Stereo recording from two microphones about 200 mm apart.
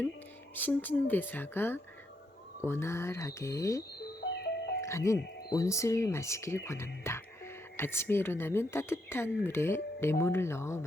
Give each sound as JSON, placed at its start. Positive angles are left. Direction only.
{"t": 0.5, "sound": "speech", "side_deg": 10}
{"t": 4.2, "sound": "music", "side_deg": 55}
{"t": 4.8, "sound": "speech", "side_deg": 15}